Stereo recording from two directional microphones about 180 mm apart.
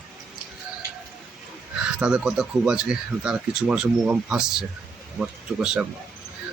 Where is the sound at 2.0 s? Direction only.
5° right (ahead or behind).